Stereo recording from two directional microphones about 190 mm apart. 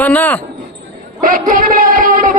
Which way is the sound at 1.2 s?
45° right (ahead or behind).